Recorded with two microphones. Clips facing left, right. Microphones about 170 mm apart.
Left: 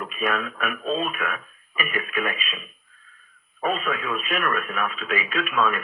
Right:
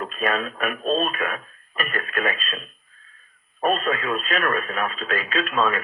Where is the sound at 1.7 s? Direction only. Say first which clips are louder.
Even; 10° left (ahead or behind).